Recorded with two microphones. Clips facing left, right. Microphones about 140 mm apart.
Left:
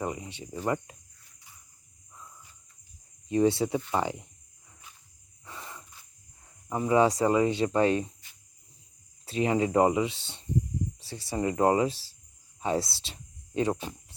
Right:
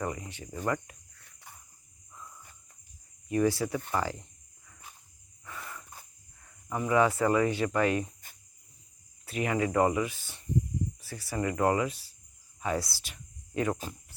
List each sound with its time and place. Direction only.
0.0 s speech: 20° left (ahead or behind)
1.2 s a sound: 60° right (ahead or behind)
3.2 s speech: 25° left (ahead or behind)
5.5 s a sound: 25° left (ahead or behind)
6.7 s speech: 25° left (ahead or behind)
9.2 s speech: 25° left (ahead or behind)